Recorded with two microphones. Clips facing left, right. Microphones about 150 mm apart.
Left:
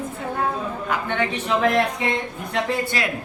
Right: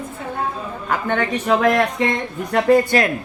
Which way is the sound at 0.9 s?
45° right (ahead or behind).